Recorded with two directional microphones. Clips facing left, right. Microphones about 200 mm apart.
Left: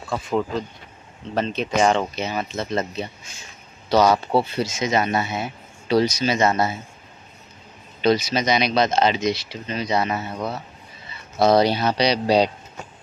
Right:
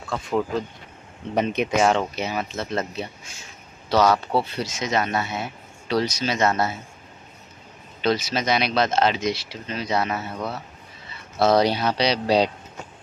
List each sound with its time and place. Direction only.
0.0 s speech: centre (ahead or behind)
1.3 s speech: 15° right (ahead or behind)
1.8 s speech: 5° right (ahead or behind)
3.9 s speech: centre (ahead or behind)
8.0 s speech: centre (ahead or behind)
10.1 s speech: 15° left (ahead or behind)
12.0 s speech: 5° right (ahead or behind)